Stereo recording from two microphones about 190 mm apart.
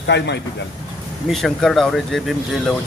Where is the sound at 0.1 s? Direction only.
65° left (ahead or behind).